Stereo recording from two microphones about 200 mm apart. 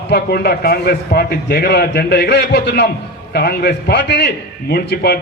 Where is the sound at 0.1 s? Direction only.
50° left (ahead or behind).